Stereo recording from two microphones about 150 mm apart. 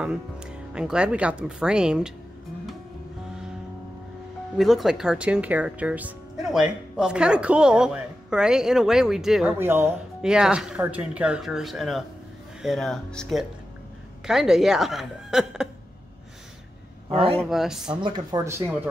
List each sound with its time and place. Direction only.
0.7 s speech: 5° right (ahead or behind)
4.6 s speech: centre (ahead or behind)
9.6 s speech: 15° right (ahead or behind)
17.4 s speech: centre (ahead or behind)
18.0 s speech: 30° right (ahead or behind)
18.4 s speech: 15° right (ahead or behind)